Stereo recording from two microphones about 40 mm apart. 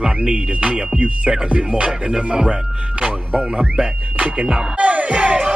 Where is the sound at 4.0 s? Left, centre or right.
Right.